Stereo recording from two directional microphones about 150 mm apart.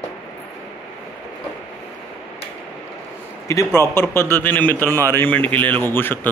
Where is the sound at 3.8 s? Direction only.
15° left (ahead or behind).